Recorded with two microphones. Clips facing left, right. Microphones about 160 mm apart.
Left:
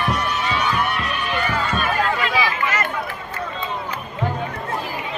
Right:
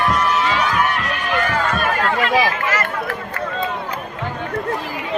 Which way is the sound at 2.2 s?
50° right (ahead or behind).